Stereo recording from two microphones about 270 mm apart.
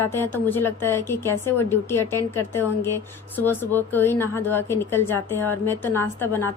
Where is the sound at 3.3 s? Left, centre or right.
Centre.